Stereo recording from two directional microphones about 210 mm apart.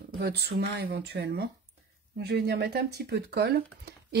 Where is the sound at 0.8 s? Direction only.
50° right (ahead or behind).